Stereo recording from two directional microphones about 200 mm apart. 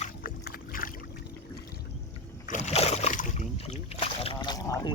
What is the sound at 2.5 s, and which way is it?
Speech, 35° left (ahead or behind).